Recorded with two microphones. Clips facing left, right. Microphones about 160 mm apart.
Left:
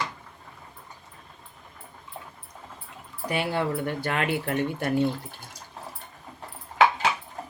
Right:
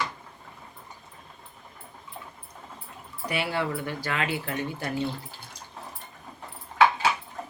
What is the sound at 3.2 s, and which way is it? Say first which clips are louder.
Speech: left 2 dB; 45° left (ahead or behind).